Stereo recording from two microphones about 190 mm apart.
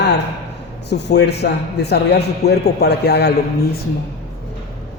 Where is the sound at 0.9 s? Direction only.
65° left (ahead or behind).